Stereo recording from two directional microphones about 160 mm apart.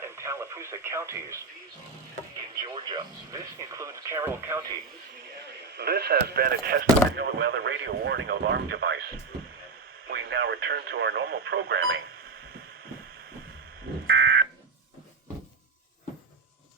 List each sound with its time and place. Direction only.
0.0 s speech: 15° right (ahead or behind)
2.6 s speech: 25° right (ahead or behind)
5.7 s speech: 90° right; by 11.9 s 75° right (ahead or behind)
14.1 s fire alarm: 90° right